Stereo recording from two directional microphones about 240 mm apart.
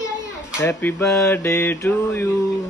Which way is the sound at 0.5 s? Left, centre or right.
Centre.